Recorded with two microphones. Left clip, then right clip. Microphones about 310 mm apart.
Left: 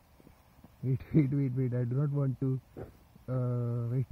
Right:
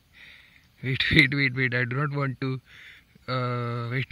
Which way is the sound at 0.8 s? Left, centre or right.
Right.